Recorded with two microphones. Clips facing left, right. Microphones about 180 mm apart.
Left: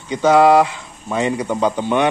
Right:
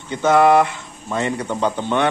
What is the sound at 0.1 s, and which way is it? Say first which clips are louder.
Speech: left 2 dB; 15° left (ahead or behind).